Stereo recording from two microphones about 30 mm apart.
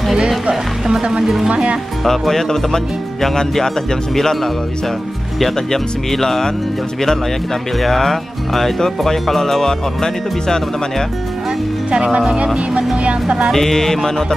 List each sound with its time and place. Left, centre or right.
1.2 s speech: centre
1.5 s speech: right
2.0 s speech: centre
5.7 s speech: centre
7.8 s speech: centre
11.9 s speech: right
13.5 s speech: centre